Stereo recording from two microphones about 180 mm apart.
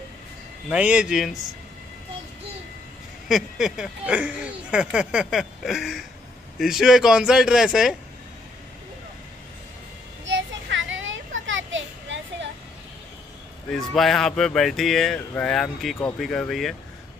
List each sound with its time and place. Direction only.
0.7 s speech: 5° right (ahead or behind)
3.3 s speech: 5° right (ahead or behind)
10.2 s children playing: 90° right
13.7 s speech: centre (ahead or behind)